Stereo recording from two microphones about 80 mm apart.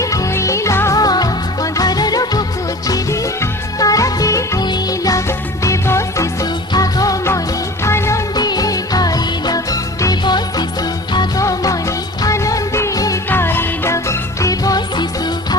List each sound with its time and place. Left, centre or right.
0.0 s music: left
0.9 s music: left
4.6 s music: left
5.6 s music: left
6.4 s music: left
7.9 s music: left
8.4 s music: left
11.3 s music: left
13.3 s music: left